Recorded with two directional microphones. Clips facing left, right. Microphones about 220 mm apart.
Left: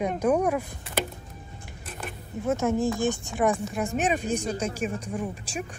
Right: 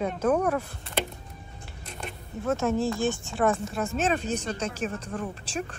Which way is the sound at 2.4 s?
15° left (ahead or behind).